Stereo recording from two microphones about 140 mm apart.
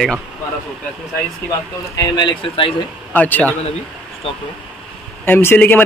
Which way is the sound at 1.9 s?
30° left (ahead or behind).